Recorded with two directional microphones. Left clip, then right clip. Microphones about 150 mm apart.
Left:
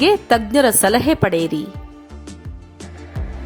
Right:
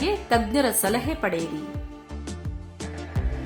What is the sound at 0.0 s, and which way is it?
A woman's voice, 55° left (ahead or behind).